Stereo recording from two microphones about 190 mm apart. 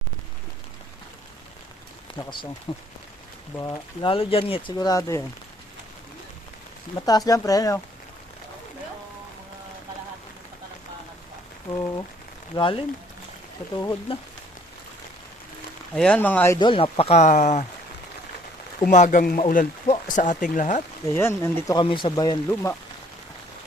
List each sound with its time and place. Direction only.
2.1 s rain on surface: 25° left (ahead or behind)
2.7 s speech: 25° left (ahead or behind)
6.9 s speech: 20° left (ahead or behind)
11.7 s speech: 20° left (ahead or behind)
14.1 s speech: 30° left (ahead or behind)
16.0 s speech: 5° left (ahead or behind)
16.6 s speech: 25° left (ahead or behind)
18.9 s speech: 40° left (ahead or behind)
21.2 s speech: 15° left (ahead or behind)
21.8 s speech: 25° left (ahead or behind)